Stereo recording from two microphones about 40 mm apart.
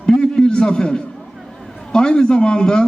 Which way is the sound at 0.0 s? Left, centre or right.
Left.